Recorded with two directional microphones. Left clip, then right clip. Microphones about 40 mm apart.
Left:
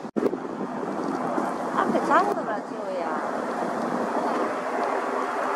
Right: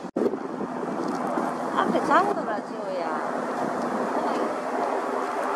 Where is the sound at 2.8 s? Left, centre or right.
Right.